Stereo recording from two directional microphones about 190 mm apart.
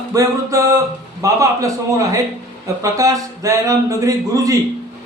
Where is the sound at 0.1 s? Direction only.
20° right (ahead or behind).